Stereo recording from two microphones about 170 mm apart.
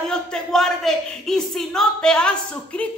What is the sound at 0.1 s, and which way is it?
A woman's voice, 5° left (ahead or behind).